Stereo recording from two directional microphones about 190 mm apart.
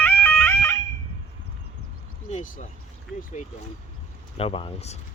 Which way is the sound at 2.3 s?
40° left (ahead or behind).